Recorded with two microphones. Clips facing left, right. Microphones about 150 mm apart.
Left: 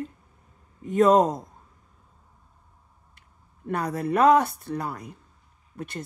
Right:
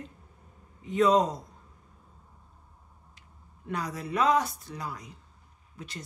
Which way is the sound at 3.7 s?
55° left (ahead or behind).